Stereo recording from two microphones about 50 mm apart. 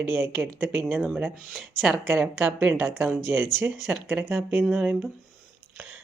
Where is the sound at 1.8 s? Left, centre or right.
Centre.